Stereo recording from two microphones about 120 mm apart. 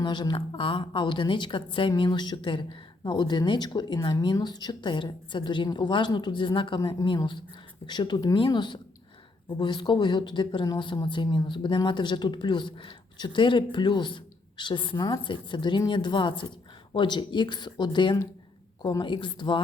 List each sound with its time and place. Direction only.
0.0 s speech: 40° left (ahead or behind)